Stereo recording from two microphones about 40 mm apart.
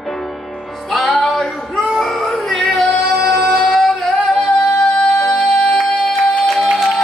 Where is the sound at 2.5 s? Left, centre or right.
Centre.